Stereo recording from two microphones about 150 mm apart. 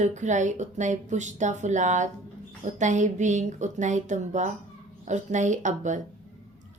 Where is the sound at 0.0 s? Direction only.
55° right (ahead or behind).